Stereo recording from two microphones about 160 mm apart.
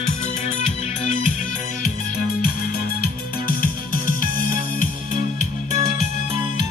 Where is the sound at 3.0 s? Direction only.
65° left (ahead or behind).